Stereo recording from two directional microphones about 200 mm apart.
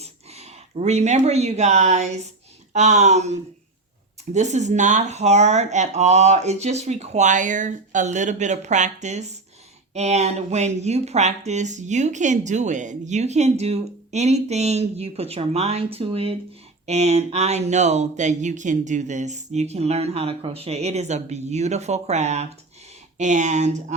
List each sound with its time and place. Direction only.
0.0 s speech: 30° right (ahead or behind)
4.4 s speech: 35° right (ahead or behind)